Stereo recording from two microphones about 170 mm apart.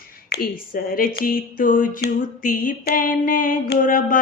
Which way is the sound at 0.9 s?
60° left (ahead or behind).